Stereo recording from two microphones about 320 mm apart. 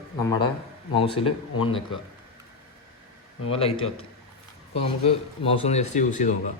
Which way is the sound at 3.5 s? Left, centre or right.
Centre.